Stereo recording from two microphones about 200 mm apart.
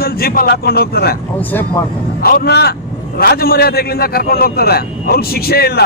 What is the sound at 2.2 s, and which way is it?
A man's voice, 50° left (ahead or behind).